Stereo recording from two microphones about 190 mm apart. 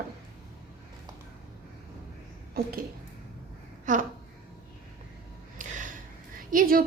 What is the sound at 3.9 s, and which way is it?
Speech, 40° right (ahead or behind).